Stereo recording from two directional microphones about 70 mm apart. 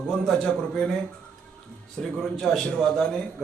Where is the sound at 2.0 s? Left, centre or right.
Centre.